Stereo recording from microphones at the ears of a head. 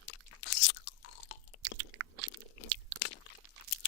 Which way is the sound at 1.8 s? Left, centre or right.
Right.